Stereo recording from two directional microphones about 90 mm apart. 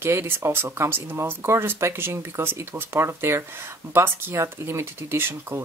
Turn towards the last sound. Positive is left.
turn(degrees=-25)  # may be behind; listen again after turning